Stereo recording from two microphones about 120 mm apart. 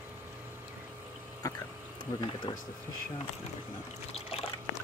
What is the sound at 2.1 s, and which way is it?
Speech, 25° left (ahead or behind).